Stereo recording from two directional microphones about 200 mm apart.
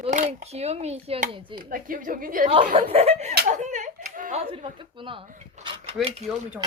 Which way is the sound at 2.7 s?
30° right (ahead or behind).